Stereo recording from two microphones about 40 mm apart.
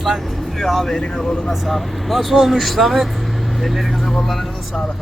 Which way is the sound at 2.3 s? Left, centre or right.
Centre.